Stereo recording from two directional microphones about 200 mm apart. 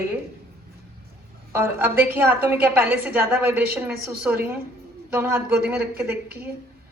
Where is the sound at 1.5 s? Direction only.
10° right (ahead or behind).